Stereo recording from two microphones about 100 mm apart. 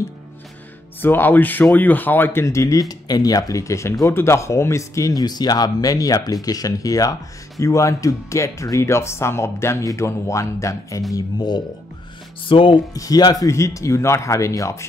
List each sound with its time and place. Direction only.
1.0 s speech: 20° left (ahead or behind)
11.1 s speech: 45° left (ahead or behind)
12.4 s speech: 60° left (ahead or behind)
12.9 s speech: 35° left (ahead or behind)